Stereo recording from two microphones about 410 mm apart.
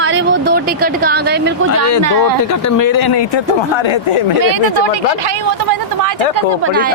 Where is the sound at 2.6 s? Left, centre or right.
Left.